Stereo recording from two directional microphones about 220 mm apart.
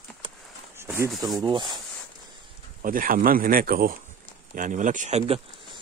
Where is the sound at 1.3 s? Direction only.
20° right (ahead or behind).